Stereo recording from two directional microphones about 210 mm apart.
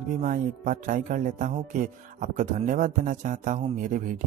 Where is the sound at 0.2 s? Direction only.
40° right (ahead or behind).